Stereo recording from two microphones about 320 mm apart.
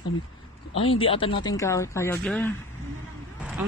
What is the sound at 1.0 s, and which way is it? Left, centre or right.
Speech, centre.